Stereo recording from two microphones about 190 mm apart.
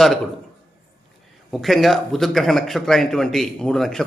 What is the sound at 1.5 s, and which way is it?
A man's voice, centre (ahead or behind).